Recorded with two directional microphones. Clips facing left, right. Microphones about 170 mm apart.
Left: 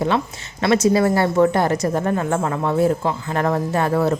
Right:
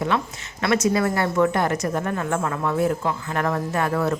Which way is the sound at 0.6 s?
30° left (ahead or behind).